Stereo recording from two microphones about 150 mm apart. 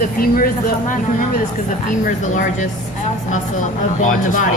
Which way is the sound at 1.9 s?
55° left (ahead or behind).